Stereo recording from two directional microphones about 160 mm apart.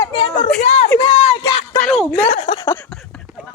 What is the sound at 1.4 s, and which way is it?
Speech, 25° left (ahead or behind).